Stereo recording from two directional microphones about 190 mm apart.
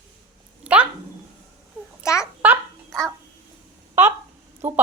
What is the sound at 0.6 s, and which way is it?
Dog, 5° right (ahead or behind).